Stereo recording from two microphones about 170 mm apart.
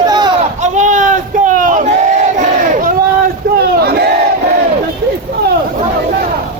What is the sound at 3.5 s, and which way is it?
Battle cry, 65° right (ahead or behind).